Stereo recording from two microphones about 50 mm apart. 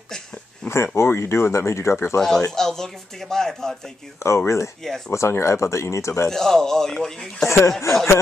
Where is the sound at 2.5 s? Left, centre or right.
Centre.